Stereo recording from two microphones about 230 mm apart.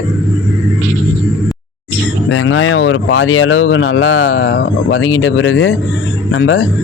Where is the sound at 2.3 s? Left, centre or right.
Left.